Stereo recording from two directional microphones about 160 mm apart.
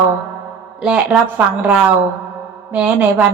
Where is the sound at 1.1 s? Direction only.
Centre (ahead or behind).